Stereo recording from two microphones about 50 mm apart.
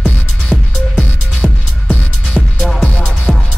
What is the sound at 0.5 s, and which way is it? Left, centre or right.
Music, left.